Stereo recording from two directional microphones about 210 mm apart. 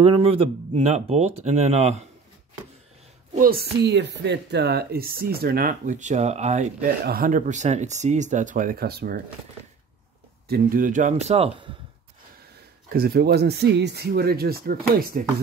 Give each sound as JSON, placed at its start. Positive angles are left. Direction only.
{"t": 0.0, "sound": "speech", "side_deg": -25}
{"t": 3.3, "sound": "speech", "side_deg": -45}
{"t": 10.5, "sound": "speech", "side_deg": -40}
{"t": 12.9, "sound": "speech", "side_deg": -45}